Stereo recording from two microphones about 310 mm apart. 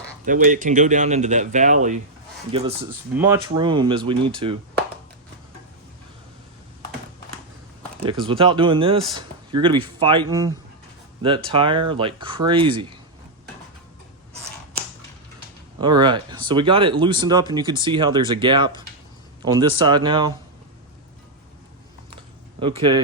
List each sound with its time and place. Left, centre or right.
0.3 s speech: right
8.0 s speech: centre
15.8 s speech: centre
22.6 s speech: centre